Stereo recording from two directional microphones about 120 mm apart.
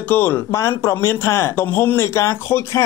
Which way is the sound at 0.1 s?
20° left (ahead or behind).